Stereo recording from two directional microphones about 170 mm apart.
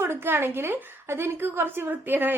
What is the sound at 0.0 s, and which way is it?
A woman's voice, 15° right (ahead or behind).